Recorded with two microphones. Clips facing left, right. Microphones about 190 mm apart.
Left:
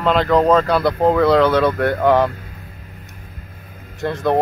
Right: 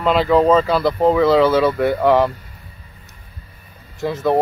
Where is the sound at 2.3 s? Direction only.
90° left.